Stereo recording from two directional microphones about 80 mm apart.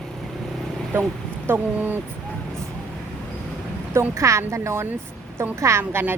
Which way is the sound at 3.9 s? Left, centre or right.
Right.